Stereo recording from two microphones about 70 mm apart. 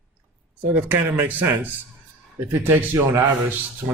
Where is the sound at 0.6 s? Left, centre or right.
Right.